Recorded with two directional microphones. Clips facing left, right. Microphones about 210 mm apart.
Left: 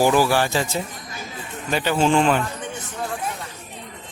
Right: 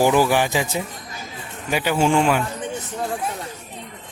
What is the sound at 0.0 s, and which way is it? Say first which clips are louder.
Speech: right 1 dB; 15° right (ahead or behind).